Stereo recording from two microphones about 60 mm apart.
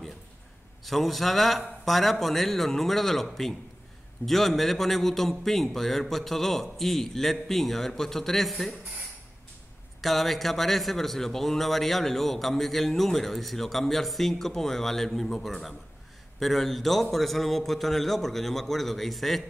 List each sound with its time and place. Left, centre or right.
0.8 s a man's voice: centre
10.0 s a man's voice: centre